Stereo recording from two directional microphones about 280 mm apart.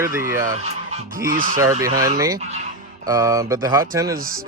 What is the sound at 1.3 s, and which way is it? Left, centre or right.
Speech, right.